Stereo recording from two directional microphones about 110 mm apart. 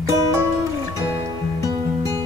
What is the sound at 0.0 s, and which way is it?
Music, 25° right (ahead or behind).